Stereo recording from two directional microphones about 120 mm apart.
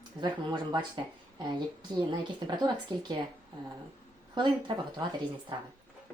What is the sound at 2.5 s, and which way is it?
Speech, 35° right (ahead or behind).